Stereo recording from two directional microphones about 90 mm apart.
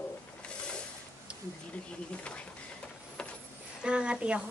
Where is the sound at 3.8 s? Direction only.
10° right (ahead or behind).